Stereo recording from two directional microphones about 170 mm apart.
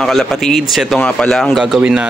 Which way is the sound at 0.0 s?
Centre (ahead or behind).